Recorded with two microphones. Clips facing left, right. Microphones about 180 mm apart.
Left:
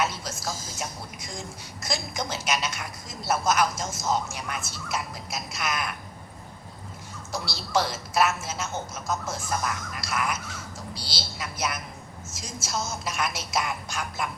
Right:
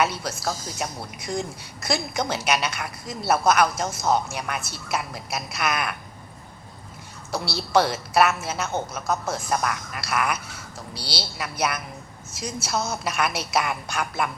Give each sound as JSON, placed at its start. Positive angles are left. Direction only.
{"t": 0.0, "sound": "a woman's voice", "side_deg": -65}
{"t": 7.3, "sound": "a woman's voice", "side_deg": -65}